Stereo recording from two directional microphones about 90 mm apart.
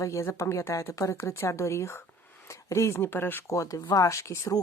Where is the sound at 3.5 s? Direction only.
40° left (ahead or behind).